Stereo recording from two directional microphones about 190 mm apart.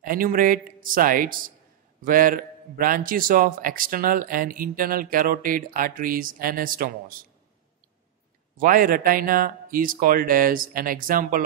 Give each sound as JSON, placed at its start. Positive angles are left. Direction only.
{"t": 0.0, "sound": "a man's voice", "side_deg": -45}
{"t": 8.5, "sound": "a man's voice", "side_deg": -50}